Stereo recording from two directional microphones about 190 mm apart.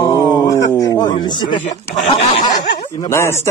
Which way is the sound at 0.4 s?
20° left (ahead or behind).